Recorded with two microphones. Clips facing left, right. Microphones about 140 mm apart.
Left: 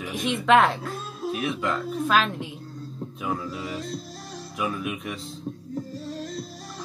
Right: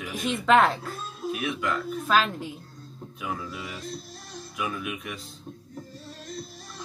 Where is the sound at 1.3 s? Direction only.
25° left (ahead or behind).